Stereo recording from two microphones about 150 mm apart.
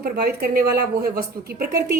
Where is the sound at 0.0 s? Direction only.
85° right.